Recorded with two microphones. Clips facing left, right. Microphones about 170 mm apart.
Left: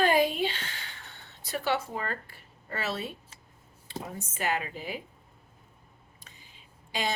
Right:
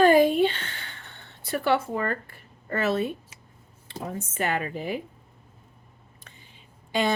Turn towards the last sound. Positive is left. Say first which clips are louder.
# right 7 dB
turn(degrees=-55)  # may be behind; listen again after turning